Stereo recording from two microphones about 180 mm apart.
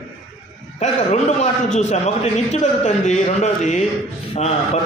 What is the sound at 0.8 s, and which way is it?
A man's voice, 40° left (ahead or behind).